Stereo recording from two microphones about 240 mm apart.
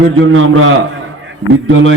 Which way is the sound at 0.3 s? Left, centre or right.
Right.